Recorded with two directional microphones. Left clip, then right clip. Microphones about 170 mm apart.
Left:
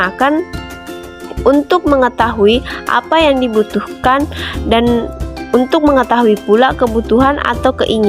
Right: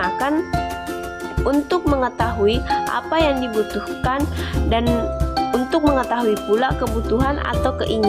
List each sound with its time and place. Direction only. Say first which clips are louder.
0.0 s speech: left 8 dB; 40° left (ahead or behind)
1.5 s speech: left 9 dB; 35° left (ahead or behind)